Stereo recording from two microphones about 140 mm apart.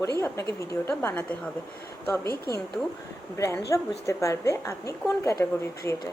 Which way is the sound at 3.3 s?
20° left (ahead or behind).